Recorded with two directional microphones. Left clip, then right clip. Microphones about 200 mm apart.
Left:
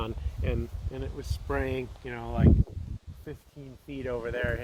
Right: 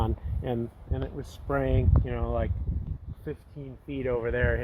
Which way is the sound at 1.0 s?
40° right (ahead or behind).